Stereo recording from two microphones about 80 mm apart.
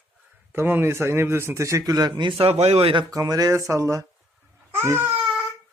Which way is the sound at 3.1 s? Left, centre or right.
Right.